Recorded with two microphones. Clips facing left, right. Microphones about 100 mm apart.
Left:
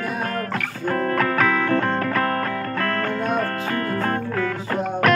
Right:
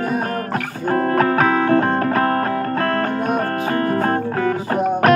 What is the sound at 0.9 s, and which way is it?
Music, 30° right (ahead or behind).